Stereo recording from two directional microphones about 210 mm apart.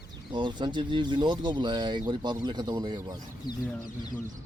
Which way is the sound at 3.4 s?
20° left (ahead or behind).